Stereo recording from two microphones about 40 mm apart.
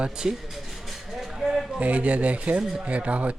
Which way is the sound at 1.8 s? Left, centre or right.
Right.